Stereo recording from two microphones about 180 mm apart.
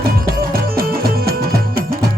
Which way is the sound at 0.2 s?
55° right (ahead or behind).